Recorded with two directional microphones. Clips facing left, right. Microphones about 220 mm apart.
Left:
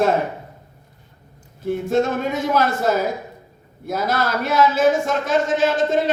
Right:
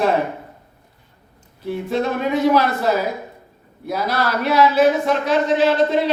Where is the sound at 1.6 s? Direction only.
45° left (ahead or behind).